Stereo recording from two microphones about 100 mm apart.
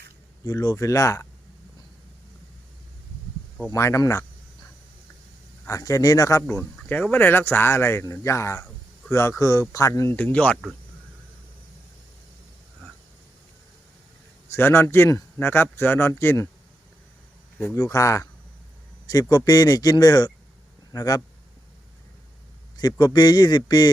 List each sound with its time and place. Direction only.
0.4 s speech: 40° left (ahead or behind)
3.7 s speech: 30° left (ahead or behind)
5.6 s speech: 35° left (ahead or behind)
6.6 s a man's voice: 20° left (ahead or behind); by 10.2 s 35° left (ahead or behind)
10.2 s speech: 15° left (ahead or behind)
14.5 s speech: 25° left (ahead or behind)
17.7 s speech: 35° left (ahead or behind)
19.3 s speech: 40° left (ahead or behind)
22.8 s a man's voice: 40° left (ahead or behind)